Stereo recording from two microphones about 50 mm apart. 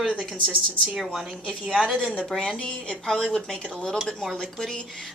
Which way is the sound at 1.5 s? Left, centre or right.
Centre.